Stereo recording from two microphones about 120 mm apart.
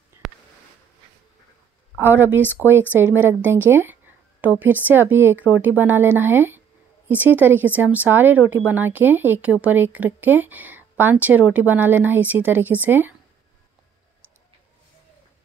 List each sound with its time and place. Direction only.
2.0 s speech: 15° right (ahead or behind)